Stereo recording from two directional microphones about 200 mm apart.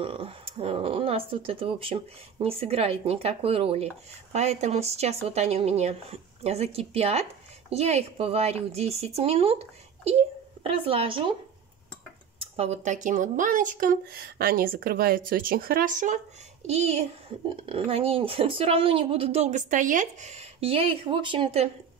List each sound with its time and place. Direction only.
0.0 s a woman's voice: 25° right (ahead or behind)
12.4 s a woman's voice: 30° right (ahead or behind)